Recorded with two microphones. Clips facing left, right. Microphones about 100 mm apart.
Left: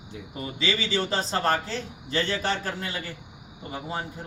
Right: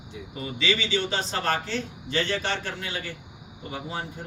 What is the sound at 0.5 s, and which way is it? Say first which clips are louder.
A man's voice: right 1 dB; 35° left (ahead or behind).